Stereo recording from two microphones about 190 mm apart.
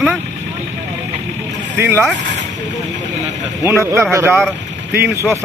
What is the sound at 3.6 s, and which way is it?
Speech, 15° right (ahead or behind).